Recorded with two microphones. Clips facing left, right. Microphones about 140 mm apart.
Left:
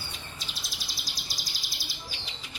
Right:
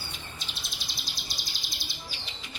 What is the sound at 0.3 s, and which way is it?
Bird, 35° left (ahead or behind).